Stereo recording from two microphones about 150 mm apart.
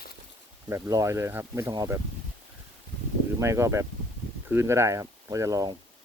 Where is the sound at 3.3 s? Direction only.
20° right (ahead or behind).